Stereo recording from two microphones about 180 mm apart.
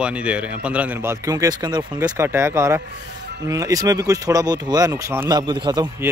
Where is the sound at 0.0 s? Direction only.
5° right (ahead or behind); by 1.9 s 25° right (ahead or behind).